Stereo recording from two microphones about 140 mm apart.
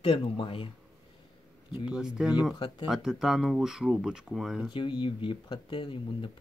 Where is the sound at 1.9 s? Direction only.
5° right (ahead or behind).